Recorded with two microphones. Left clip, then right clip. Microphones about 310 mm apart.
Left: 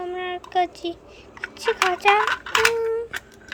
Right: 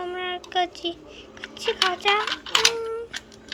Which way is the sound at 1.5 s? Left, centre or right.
Centre.